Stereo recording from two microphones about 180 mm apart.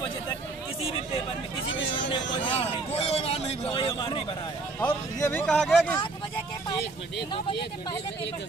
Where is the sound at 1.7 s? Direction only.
90° left.